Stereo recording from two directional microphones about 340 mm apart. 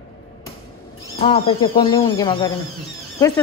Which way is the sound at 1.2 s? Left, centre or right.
Centre.